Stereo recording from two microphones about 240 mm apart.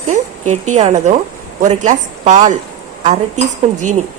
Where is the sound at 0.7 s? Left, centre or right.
Right.